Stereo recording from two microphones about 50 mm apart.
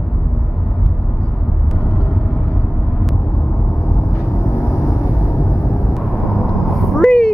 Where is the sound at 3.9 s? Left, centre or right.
Left.